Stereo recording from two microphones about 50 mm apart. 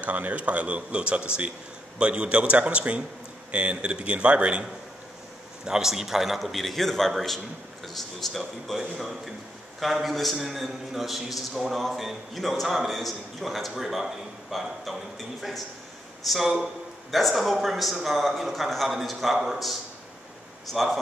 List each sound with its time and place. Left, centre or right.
0.0 s speech: right
5.7 s a man's voice: centre